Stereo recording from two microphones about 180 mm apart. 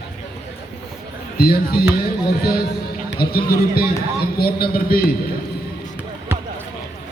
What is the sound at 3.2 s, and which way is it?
A man's voice, 60° left (ahead or behind).